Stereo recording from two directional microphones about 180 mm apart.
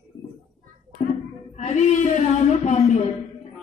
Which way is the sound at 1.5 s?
40° left (ahead or behind).